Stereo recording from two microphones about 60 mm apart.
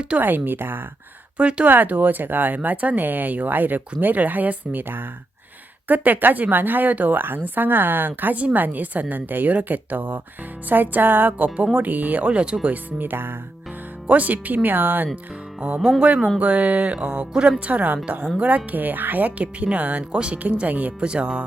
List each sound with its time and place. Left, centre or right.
0.2 s speech: right
1.4 s speech: centre
1.7 s speech: right
12.6 s speech: right
16.0 s speech: centre